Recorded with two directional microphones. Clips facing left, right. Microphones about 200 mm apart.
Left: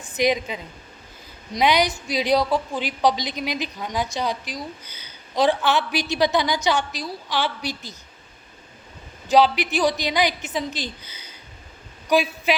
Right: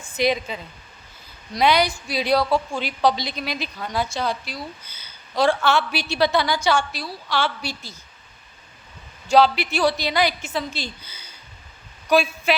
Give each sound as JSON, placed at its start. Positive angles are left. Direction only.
{"t": 0.2, "sound": "a woman's voice", "side_deg": 15}
{"t": 9.2, "sound": "a woman's voice", "side_deg": 15}
{"t": 12.0, "sound": "speech", "side_deg": 15}